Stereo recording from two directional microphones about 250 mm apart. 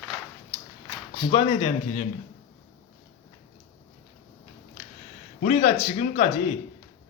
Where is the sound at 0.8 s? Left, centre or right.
Centre.